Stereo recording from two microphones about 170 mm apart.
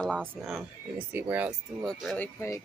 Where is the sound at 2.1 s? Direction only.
15° left (ahead or behind).